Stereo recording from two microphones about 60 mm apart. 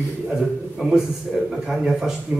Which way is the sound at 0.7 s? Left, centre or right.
Centre.